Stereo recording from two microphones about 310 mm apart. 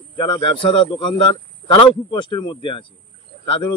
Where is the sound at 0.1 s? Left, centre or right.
Centre.